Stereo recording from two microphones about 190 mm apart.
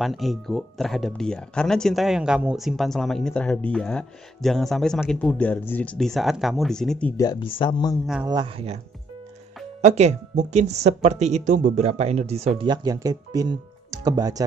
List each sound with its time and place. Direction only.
0.0 s speech: centre (ahead or behind)
7.2 s speech: 25° left (ahead or behind)
8.3 s speech: 20° right (ahead or behind)
9.8 s speech: 35° right (ahead or behind); by 14.4 s 20° right (ahead or behind)